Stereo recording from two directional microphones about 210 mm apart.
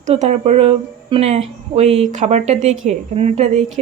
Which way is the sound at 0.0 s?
35° right (ahead or behind).